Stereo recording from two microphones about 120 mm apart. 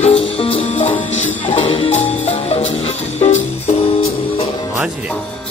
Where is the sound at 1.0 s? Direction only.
75° left (ahead or behind).